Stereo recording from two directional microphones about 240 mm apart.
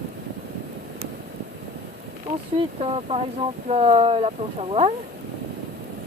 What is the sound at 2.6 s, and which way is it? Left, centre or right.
Speech, right.